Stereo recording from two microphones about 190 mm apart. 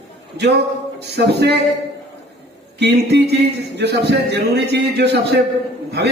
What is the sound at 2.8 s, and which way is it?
A man's voice, 65° right (ahead or behind).